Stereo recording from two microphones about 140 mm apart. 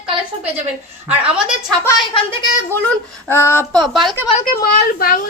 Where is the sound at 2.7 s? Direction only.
15° left (ahead or behind).